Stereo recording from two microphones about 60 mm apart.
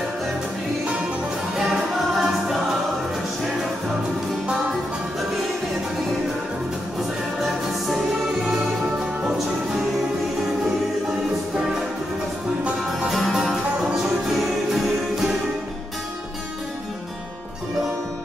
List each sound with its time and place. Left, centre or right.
1.6 s music: centre
7.4 s music: centre
9.2 s music: centre
12.8 s music: centre